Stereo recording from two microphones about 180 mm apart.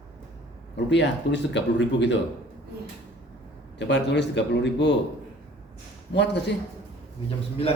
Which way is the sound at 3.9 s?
70° left (ahead or behind).